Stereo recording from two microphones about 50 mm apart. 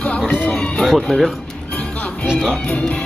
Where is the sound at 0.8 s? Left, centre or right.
Centre.